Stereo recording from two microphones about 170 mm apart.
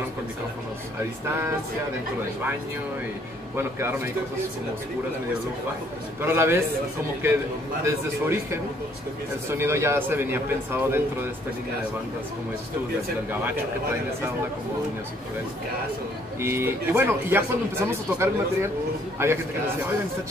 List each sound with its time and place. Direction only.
3.5 s speech: 15° right (ahead or behind)
6.2 s speech: 15° right (ahead or behind)
7.8 s speech: 15° right (ahead or behind)
16.3 s speech: 15° right (ahead or behind)